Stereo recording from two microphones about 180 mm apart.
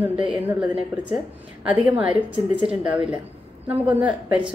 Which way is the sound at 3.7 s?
10° right (ahead or behind).